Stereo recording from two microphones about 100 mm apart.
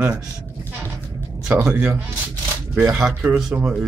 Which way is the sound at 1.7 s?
20° right (ahead or behind).